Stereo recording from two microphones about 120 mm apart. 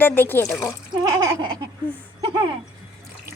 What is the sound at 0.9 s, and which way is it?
Speech, 35° right (ahead or behind).